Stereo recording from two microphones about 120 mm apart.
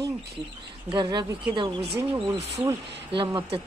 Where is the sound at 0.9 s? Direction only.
40° right (ahead or behind).